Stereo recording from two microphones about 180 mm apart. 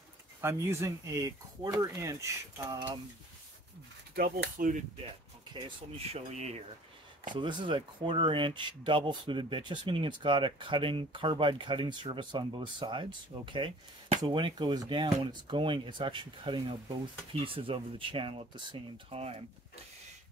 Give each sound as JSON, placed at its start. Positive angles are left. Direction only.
{"t": 0.4, "sound": "speech", "side_deg": -15}
{"t": 4.1, "sound": "speech", "side_deg": -55}
{"t": 5.5, "sound": "speech", "side_deg": -30}
{"t": 7.3, "sound": "speech", "side_deg": -25}